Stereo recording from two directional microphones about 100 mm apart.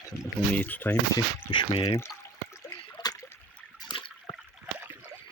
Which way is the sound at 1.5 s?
55° left (ahead or behind).